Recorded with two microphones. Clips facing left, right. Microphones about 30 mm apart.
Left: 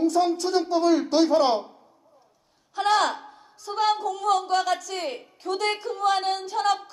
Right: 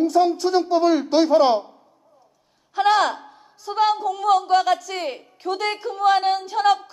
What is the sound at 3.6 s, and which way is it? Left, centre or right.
A woman's voice, centre.